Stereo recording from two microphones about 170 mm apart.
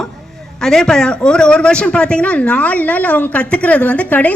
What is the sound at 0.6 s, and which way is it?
A woman's voice, 5° left (ahead or behind).